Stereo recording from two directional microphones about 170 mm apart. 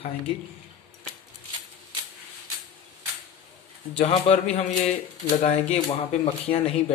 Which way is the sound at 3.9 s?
35° left (ahead or behind).